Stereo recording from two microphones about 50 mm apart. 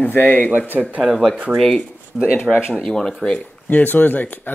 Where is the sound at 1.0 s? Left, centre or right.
Centre.